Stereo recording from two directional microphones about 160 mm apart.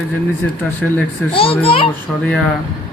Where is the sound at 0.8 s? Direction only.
Centre (ahead or behind).